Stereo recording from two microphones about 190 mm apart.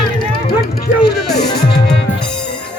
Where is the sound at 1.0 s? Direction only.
60° left (ahead or behind).